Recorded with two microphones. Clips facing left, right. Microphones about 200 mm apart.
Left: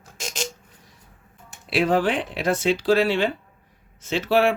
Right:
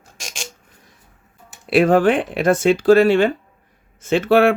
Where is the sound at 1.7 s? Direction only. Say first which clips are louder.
Right 7 dB; 50° right (ahead or behind).